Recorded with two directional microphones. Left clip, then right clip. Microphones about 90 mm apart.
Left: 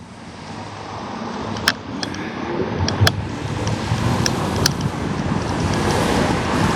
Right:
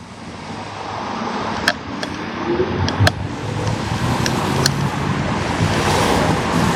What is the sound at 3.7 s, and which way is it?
Vehicle, 30° left (ahead or behind).